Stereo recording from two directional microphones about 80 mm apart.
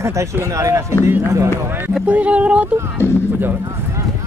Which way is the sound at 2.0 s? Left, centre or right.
Centre.